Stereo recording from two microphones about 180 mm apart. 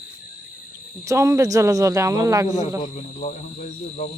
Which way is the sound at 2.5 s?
40° left (ahead or behind).